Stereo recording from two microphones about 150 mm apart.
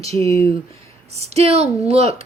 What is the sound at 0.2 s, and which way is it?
Speech, 20° left (ahead or behind).